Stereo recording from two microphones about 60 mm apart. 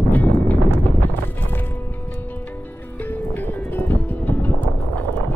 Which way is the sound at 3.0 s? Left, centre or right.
Left.